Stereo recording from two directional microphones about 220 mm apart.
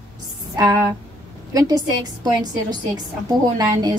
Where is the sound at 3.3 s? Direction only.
15° right (ahead or behind).